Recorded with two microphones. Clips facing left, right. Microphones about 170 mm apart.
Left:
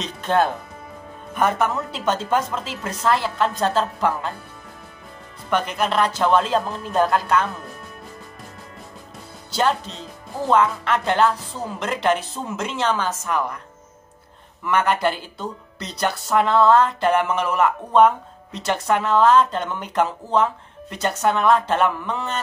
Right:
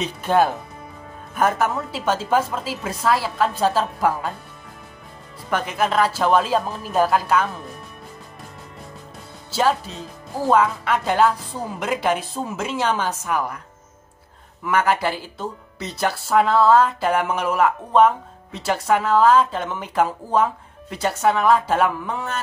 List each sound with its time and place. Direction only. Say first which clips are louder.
0.0 s a woman's voice: right 2 dB; 10° right (ahead or behind)
5.5 s speech: even; 5° right (ahead or behind)
9.5 s a woman's voice: right 1 dB; 5° right (ahead or behind)
14.6 s speech: even; 5° right (ahead or behind)